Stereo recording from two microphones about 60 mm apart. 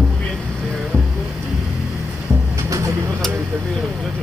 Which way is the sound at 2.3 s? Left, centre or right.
Right.